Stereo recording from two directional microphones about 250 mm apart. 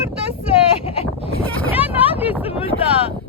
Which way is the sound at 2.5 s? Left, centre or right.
Left.